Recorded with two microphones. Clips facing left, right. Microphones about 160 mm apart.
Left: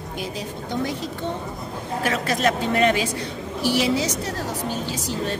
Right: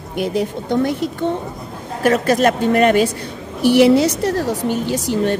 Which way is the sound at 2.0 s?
45° right (ahead or behind).